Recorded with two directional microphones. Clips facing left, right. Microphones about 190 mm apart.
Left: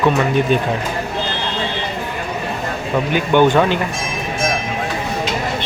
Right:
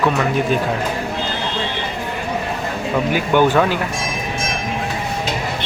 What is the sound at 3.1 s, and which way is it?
Speech, 5° right (ahead or behind).